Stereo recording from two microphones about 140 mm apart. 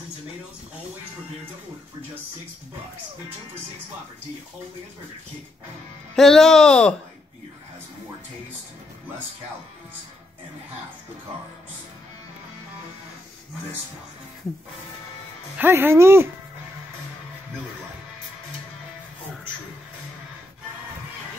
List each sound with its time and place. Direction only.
6.1 s speech: 5° left (ahead or behind)
15.5 s speech: 15° right (ahead or behind)